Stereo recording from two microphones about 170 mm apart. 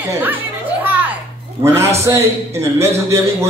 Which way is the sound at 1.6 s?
15° right (ahead or behind).